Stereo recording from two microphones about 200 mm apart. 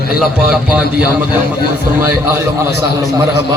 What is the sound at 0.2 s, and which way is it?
A man's voice, 5° right (ahead or behind).